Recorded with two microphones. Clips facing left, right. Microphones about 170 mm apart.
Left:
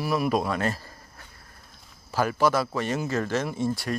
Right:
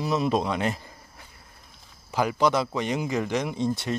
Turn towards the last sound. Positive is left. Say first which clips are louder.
# right 1 dB
turn(degrees=-20)  # may be behind; listen again after turning